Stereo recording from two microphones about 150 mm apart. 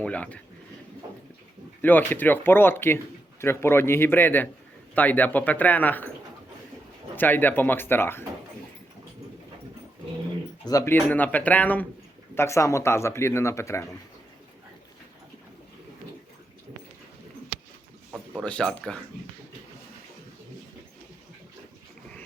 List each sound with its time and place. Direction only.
0.0 s speech: 10° left (ahead or behind)
1.8 s speech: 10° left (ahead or behind)
7.2 s speech: 10° left (ahead or behind)
10.7 s speech: 20° left (ahead or behind)
18.1 s a sound: 5° left (ahead or behind)
18.4 s speech: 10° left (ahead or behind)